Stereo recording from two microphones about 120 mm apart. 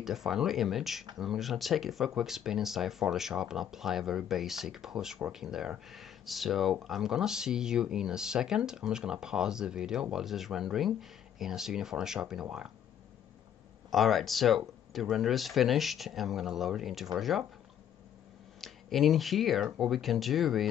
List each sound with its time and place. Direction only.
0.0 s speech: centre (ahead or behind)
13.8 s speech: centre (ahead or behind)
18.6 s speech: centre (ahead or behind)